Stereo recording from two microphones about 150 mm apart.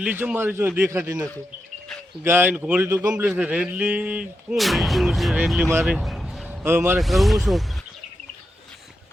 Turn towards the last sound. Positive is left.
turn(degrees=0)  # may be behind; listen again after turning